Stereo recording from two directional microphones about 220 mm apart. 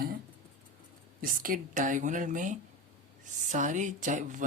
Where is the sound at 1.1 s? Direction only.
40° right (ahead or behind).